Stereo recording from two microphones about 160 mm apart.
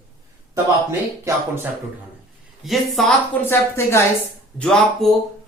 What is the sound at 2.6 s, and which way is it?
Speech, centre (ahead or behind).